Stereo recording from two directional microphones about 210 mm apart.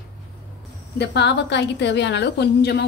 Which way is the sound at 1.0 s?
55° left (ahead or behind).